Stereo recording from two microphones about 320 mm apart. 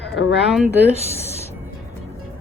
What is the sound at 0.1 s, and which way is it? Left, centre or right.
Speech, left.